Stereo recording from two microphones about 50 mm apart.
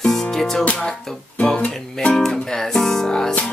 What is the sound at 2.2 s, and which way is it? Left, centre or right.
Music, centre.